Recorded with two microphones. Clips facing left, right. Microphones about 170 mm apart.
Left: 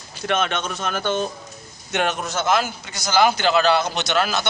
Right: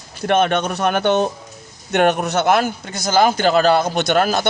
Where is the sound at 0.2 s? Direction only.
55° right (ahead or behind).